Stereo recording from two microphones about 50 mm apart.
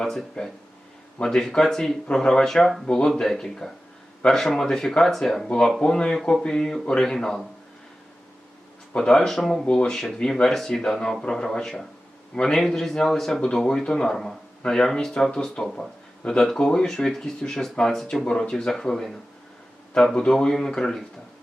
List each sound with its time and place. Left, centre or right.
0.4 s speech: centre
2.8 s speech: centre
5.8 s speech: centre
9.0 s speech: centre
9.6 s speech: centre
9.9 s speech: centre
13.4 s speech: centre
20.5 s speech: centre